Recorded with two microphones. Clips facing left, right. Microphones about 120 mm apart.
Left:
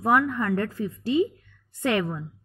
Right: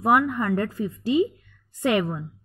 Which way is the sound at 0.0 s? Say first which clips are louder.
Right 2 dB; 10° right (ahead or behind).